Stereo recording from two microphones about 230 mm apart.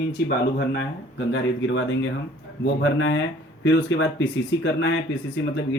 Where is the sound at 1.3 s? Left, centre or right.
Left.